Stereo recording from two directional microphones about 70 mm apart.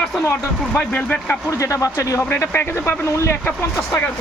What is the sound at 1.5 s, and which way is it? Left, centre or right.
Speech, left.